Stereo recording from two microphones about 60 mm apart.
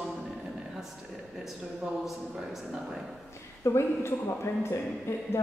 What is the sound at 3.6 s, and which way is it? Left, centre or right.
Speech, left.